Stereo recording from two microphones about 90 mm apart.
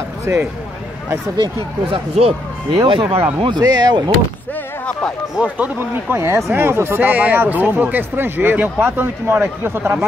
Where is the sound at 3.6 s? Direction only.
50° right (ahead or behind).